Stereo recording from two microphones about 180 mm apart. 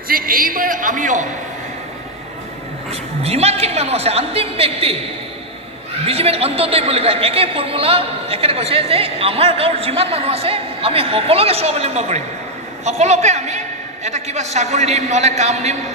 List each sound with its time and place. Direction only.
0.1 s speech: 50° right (ahead or behind)
2.9 s a man's voice: 35° right (ahead or behind)
6.0 s a man's voice: 35° right (ahead or behind)